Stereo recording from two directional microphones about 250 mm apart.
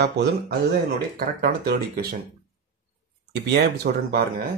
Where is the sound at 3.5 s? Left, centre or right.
Right.